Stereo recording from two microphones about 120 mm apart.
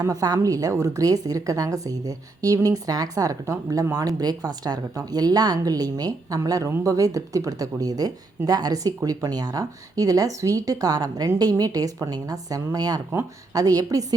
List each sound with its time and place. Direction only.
0.0 s a woman's voice: 30° right (ahead or behind)